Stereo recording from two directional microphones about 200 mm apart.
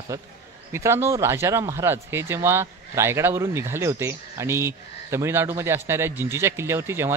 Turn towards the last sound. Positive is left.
turn(degrees=-10)  # may be behind; listen again after turning